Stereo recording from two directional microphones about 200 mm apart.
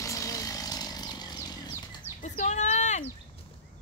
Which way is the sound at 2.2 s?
35° left (ahead or behind).